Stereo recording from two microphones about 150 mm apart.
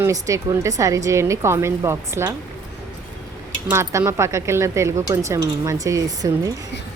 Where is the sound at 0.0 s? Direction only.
20° right (ahead or behind).